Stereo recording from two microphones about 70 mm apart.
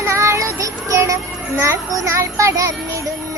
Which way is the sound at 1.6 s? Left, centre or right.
Right.